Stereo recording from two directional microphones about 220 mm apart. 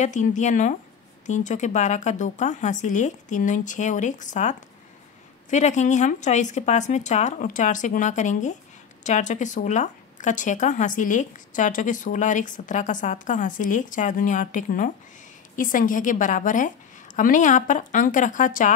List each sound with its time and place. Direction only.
0.0 s speech: 35° left (ahead or behind)